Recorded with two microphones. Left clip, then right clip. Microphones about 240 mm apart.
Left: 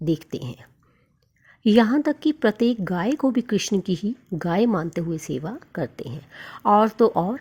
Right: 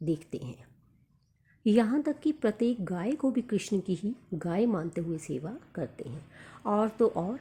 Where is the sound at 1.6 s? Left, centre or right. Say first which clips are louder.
Left 8 dB; left.